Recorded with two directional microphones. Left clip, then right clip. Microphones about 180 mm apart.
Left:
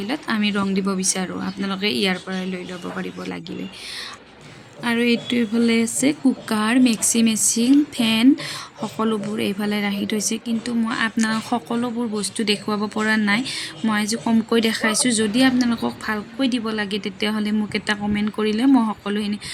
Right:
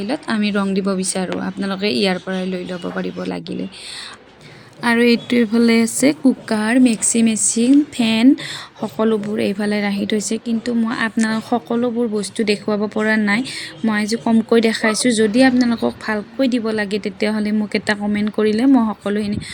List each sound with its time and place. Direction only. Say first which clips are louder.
0.0 s speech: right 2 dB; 10° right (ahead or behind)
4.8 s a woman's voice: right 6 dB; 30° right (ahead or behind)
6.5 s speech: right 1 dB; 10° right (ahead or behind)